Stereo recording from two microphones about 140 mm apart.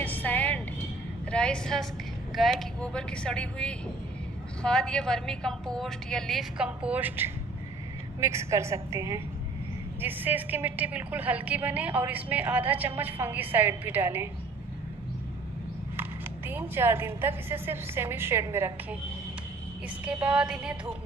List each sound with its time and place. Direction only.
0.0 s music: 10° left (ahead or behind)
1.3 s a woman's voice: 5° left (ahead or behind); by 14.3 s 15° right (ahead or behind)
16.0 s a woman's voice: 15° right (ahead or behind)
20.1 s a woman's voice: 10° right (ahead or behind)